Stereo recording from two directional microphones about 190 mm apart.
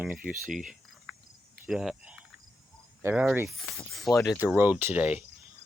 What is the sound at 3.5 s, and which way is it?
Speech, centre (ahead or behind).